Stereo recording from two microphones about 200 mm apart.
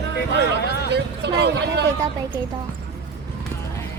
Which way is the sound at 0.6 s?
55° left (ahead or behind).